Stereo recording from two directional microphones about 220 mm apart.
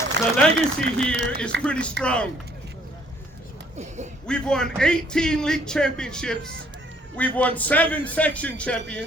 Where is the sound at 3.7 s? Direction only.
30° right (ahead or behind).